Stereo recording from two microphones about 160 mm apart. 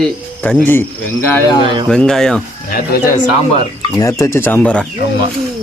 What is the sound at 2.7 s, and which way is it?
Speech, 65° left (ahead or behind).